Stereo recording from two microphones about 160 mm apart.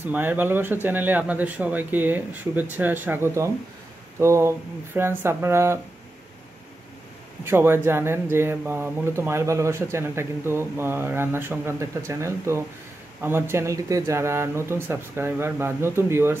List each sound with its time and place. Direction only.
0.0 s speech: 10° right (ahead or behind)
7.4 s speech: 15° right (ahead or behind)